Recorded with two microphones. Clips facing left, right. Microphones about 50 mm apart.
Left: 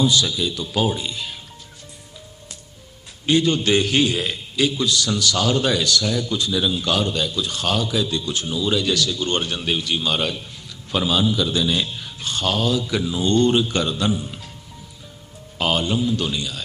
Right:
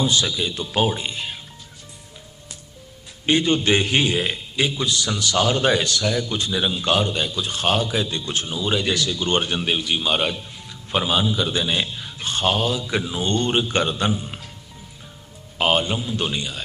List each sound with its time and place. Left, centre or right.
0.0 s speech: right
3.2 s a man's voice: right
15.5 s a man's voice: right